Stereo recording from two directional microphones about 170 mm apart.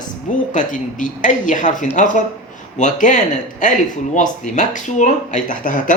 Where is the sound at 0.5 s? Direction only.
50° left (ahead or behind).